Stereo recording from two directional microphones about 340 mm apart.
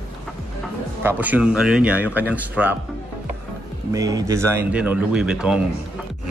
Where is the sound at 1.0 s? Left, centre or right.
Centre.